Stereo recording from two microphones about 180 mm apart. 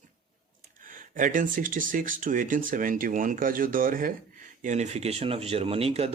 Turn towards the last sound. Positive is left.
turn(degrees=-35)  # may be behind; listen again after turning